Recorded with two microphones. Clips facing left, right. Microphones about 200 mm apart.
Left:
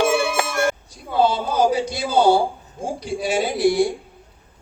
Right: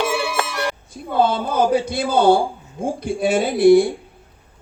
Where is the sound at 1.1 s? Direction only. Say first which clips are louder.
Right 1 dB; 55° right (ahead or behind).